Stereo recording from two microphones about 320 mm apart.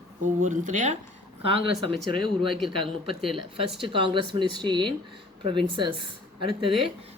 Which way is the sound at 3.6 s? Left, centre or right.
Centre.